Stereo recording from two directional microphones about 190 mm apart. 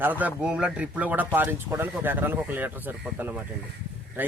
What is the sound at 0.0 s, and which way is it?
Speech, 10° right (ahead or behind).